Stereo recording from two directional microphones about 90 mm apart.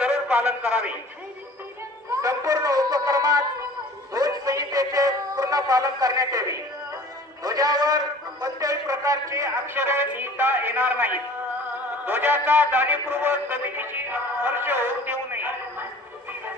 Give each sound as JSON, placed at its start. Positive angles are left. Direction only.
{"t": 0.0, "sound": "a man's voice", "side_deg": -20}
{"t": 2.2, "sound": "a man's voice", "side_deg": -40}